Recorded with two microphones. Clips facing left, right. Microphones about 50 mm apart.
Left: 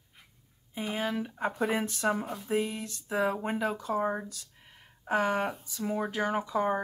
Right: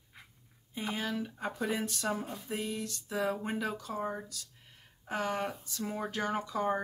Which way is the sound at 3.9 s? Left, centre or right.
Left.